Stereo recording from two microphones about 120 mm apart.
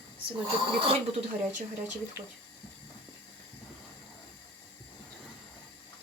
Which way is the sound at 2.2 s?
20° right (ahead or behind).